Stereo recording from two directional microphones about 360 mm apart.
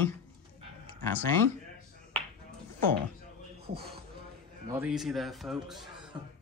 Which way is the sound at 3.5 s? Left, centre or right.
Right.